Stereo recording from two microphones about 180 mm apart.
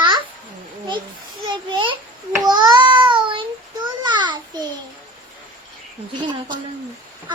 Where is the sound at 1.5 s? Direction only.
25° right (ahead or behind).